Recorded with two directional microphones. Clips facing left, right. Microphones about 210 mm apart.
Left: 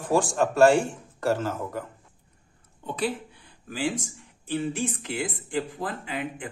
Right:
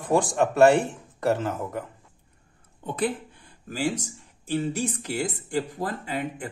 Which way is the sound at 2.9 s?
50° right (ahead or behind).